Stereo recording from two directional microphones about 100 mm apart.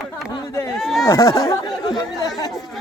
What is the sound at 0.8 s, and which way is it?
Speech, centre (ahead or behind).